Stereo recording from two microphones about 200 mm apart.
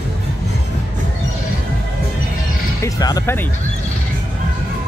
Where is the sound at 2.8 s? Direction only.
15° left (ahead or behind).